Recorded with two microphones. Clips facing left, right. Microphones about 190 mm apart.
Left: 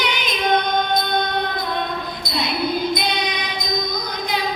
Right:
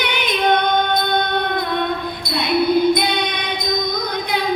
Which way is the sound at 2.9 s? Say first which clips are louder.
Right 3 dB; 60° right (ahead or behind).